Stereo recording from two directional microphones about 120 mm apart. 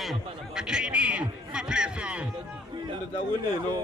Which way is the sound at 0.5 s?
5° right (ahead or behind).